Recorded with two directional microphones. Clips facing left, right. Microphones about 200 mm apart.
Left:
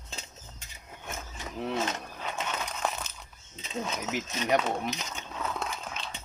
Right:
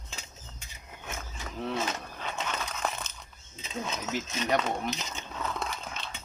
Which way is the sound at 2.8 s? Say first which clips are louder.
Left 2 dB; 5° left (ahead or behind).